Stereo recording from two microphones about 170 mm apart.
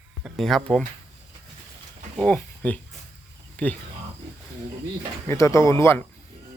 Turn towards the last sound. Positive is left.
turn(degrees=15)  # may be behind; listen again after turning